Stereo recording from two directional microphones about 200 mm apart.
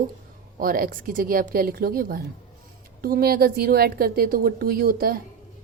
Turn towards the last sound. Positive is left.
turn(degrees=-45)  # may be behind; listen again after turning